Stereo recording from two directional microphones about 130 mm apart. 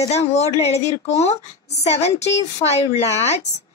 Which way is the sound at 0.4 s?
55° left (ahead or behind).